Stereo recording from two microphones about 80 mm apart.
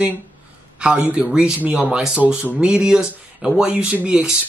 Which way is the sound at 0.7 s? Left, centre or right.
Centre.